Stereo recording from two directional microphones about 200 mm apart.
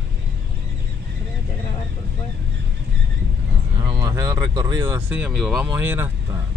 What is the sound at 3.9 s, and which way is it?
Speech, 15° right (ahead or behind).